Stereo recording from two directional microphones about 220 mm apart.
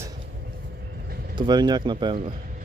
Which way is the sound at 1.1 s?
45° right (ahead or behind).